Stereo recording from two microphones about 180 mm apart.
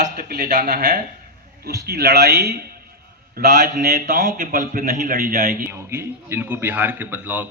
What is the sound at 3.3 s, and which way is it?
A man's voice, 50° right (ahead or behind).